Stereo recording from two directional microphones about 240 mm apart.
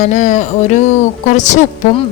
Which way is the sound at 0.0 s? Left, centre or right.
Left.